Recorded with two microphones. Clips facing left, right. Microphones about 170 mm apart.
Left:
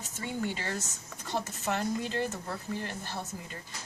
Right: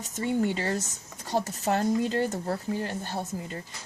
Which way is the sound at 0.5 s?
35° right (ahead or behind).